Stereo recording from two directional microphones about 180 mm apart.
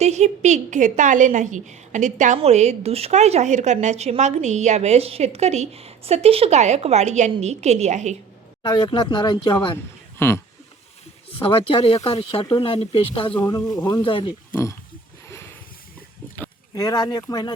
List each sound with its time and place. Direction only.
0.0 s a woman's voice: 40° right (ahead or behind)
8.6 s speech: 25° left (ahead or behind)
10.2 s speech: 15° left (ahead or behind)
12.0 s speech: 30° left (ahead or behind)
13.7 s speech: 20° left (ahead or behind)
14.5 s speech: 15° left (ahead or behind)
16.3 s speech: 15° left (ahead or behind)